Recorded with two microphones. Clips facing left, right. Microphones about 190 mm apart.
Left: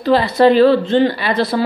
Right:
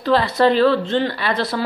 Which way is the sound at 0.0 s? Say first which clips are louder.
Left 4 dB; 10° left (ahead or behind).